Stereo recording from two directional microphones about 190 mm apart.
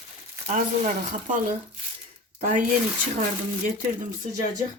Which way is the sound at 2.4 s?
45° right (ahead or behind).